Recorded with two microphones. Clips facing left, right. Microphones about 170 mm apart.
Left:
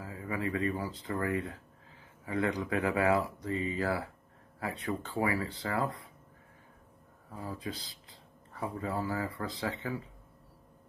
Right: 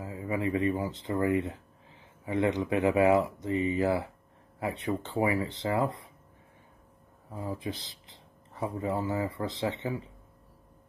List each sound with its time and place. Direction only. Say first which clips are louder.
0.0 s speech: right 4 dB; 25° right (ahead or behind)
7.3 s speech: right 4 dB; 25° right (ahead or behind)